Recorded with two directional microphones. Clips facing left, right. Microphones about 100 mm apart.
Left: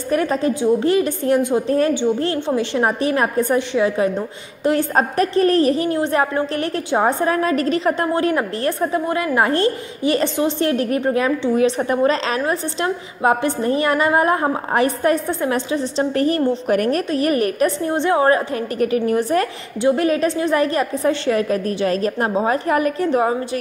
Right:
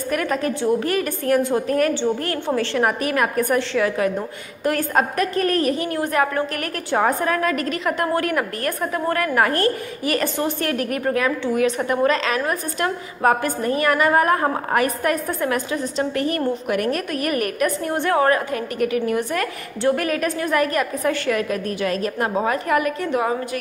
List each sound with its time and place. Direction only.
0.1 s a woman's voice: 25° left (ahead or behind)